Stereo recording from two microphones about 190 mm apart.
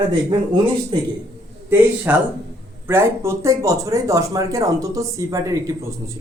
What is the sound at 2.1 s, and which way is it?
Speech, 10° right (ahead or behind).